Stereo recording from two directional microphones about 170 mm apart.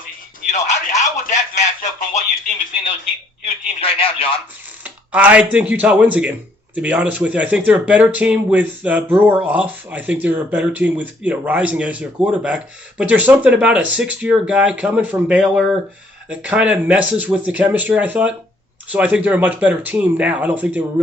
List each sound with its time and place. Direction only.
0.5 s a sound: 45° left (ahead or behind)
3.4 s speech: 35° left (ahead or behind)
4.8 s speech: 10° right (ahead or behind)